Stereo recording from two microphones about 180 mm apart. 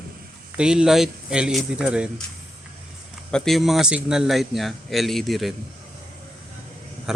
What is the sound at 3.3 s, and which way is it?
A man's voice, centre (ahead or behind).